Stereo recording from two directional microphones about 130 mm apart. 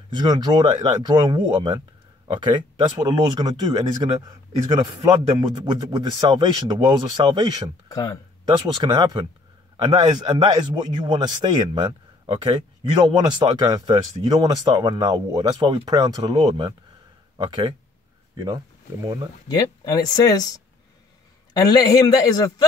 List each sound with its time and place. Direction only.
0.1 s speech: 30° right (ahead or behind)
7.9 s speech: 25° left (ahead or behind)
8.7 s speech: 35° right (ahead or behind)
19.4 s speech: 30° left (ahead or behind)